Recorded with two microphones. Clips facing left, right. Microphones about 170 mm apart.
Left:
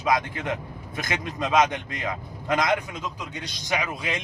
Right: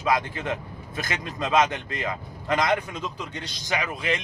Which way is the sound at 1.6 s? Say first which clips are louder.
Left 1 dB; 15° left (ahead or behind).